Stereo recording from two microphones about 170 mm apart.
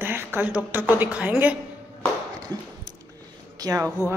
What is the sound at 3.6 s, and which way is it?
Speech, 20° right (ahead or behind).